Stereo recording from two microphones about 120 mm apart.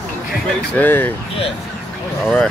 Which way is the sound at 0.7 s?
15° left (ahead or behind).